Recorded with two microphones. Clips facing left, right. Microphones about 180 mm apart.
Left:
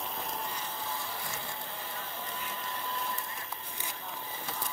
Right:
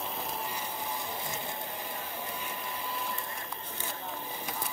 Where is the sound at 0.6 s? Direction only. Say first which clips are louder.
Right 2 dB; 20° right (ahead or behind).